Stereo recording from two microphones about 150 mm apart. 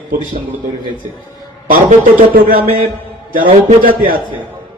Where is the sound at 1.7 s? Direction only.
75° right (ahead or behind).